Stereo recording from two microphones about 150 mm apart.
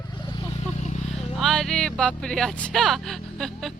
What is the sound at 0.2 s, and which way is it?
Vehicle, 30° left (ahead or behind).